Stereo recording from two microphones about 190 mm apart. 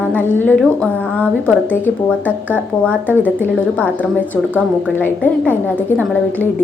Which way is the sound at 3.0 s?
10° right (ahead or behind).